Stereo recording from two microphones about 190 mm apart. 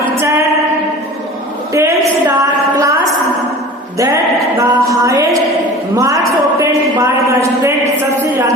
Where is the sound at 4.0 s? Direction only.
15° right (ahead or behind).